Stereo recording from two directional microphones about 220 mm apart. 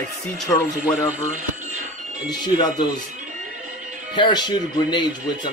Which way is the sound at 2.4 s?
20° left (ahead or behind).